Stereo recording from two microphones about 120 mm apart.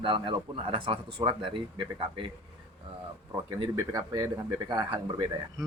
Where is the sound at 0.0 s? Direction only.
45° right (ahead or behind).